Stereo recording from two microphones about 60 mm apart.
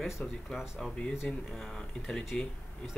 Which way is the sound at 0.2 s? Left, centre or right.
Left.